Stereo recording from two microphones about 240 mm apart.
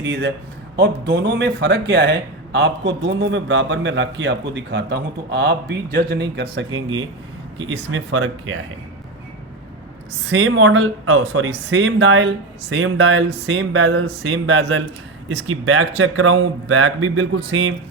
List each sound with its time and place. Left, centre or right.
0.0 s a man's voice: right
7.9 s speech: right
10.2 s a man's voice: right